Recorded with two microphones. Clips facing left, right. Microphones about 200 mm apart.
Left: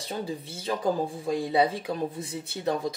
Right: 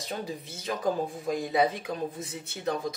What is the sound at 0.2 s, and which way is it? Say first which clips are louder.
Speech: left 3 dB; 30° left (ahead or behind).